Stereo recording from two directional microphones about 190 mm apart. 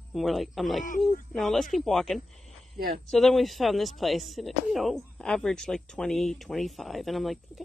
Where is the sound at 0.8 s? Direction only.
45° left (ahead or behind).